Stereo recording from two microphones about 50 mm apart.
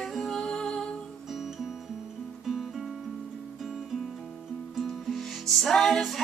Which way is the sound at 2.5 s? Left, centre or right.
Centre.